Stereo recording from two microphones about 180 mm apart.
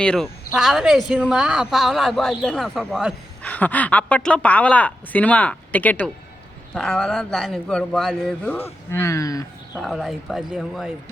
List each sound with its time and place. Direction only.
0.0 s a man's voice: 5° left (ahead or behind)
3.4 s a woman's voice: 10° left (ahead or behind)
9.7 s a man's voice: centre (ahead or behind)